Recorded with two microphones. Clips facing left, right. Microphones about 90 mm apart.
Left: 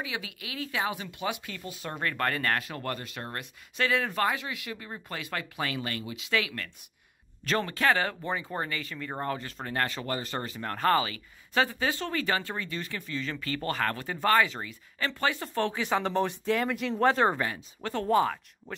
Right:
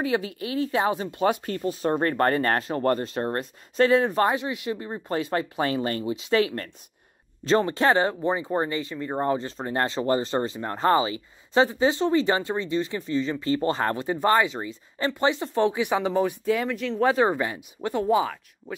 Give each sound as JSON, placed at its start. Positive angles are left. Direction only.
{"t": 0.0, "sound": "speech", "side_deg": -40}
{"t": 7.4, "sound": "speech", "side_deg": -25}